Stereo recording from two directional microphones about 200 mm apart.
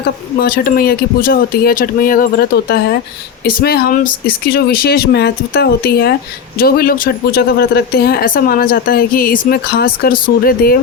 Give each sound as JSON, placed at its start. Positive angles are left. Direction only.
{"t": 0.0, "sound": "speech", "side_deg": 50}